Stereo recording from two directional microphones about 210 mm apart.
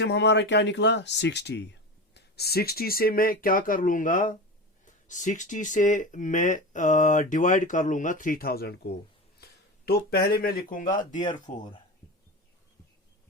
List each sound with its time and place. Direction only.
0.0 s speech: 55° left (ahead or behind)
11.1 s speech: 20° left (ahead or behind)